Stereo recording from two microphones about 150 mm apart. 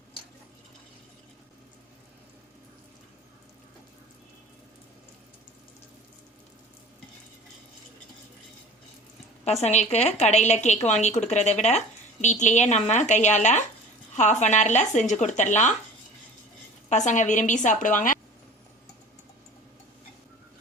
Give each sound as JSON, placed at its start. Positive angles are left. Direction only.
{"t": 9.4, "sound": "a woman's voice", "side_deg": 45}
{"t": 16.9, "sound": "a woman's voice", "side_deg": 55}